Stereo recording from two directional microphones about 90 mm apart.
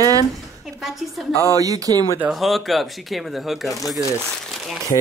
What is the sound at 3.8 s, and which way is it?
Speech, 40° left (ahead or behind).